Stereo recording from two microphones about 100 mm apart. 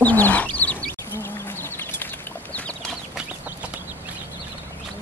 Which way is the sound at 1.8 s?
20° left (ahead or behind).